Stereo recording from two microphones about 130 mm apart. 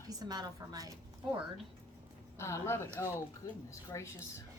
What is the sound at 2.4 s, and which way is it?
Speech, 20° left (ahead or behind).